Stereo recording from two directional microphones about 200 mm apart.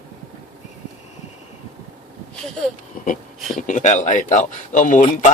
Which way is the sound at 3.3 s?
Centre (ahead or behind).